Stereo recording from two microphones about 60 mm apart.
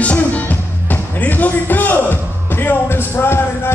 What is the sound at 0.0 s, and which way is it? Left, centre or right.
Music, left.